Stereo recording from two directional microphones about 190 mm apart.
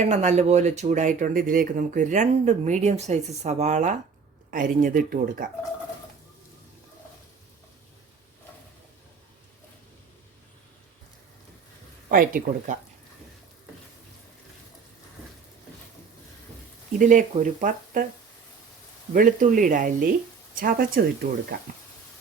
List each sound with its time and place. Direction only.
0.0 s speech: 40° right (ahead or behind)
12.0 s speech: 45° right (ahead or behind)
17.0 s speech: 40° right (ahead or behind)
19.1 s speech: 45° right (ahead or behind)